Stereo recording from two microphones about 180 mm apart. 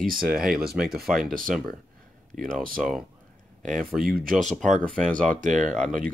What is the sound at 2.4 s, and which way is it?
Speech, 50° right (ahead or behind).